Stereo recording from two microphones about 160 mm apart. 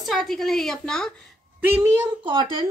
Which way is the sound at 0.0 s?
Centre (ahead or behind).